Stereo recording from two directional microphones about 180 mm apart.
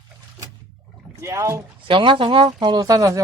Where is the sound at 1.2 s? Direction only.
15° right (ahead or behind).